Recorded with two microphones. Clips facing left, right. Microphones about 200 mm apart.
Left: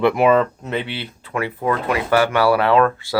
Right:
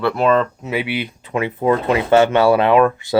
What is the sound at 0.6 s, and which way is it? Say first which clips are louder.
Speech: right 3 dB; 5° right (ahead or behind).